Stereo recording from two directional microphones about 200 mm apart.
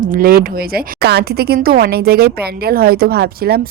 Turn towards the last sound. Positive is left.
turn(degrees=-50)  # may be behind; listen again after turning